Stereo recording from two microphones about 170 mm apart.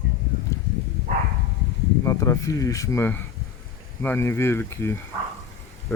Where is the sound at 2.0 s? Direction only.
20° left (ahead or behind).